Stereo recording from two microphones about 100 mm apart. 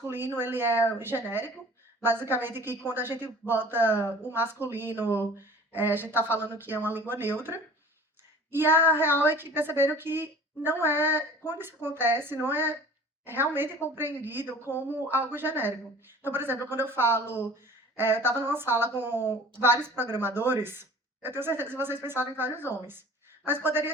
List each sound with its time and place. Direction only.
0.0 s a woman's voice: 20° right (ahead or behind)